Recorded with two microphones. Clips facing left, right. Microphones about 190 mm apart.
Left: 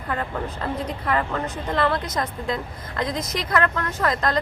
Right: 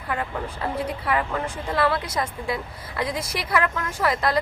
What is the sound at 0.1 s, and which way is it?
A woman's voice, 10° right (ahead or behind).